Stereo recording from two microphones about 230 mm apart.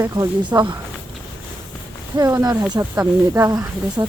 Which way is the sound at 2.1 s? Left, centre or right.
Centre.